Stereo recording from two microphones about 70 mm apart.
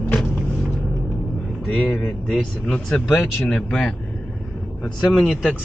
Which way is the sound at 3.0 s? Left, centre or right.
Left.